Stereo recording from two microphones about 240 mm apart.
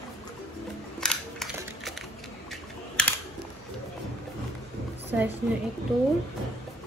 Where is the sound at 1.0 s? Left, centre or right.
Centre.